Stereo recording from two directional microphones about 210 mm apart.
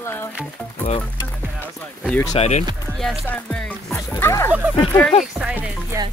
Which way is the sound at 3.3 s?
5° left (ahead or behind).